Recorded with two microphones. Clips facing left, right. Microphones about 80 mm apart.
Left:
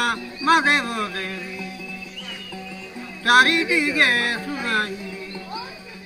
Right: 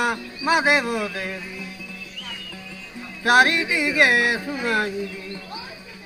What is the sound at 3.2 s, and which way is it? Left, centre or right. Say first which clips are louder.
Speech: left 1 dB; right.